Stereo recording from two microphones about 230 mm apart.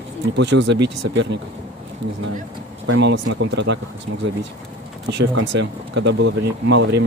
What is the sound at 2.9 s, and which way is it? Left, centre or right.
Speech, right.